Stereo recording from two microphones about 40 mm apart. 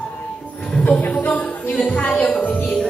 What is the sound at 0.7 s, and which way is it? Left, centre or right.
Music, left.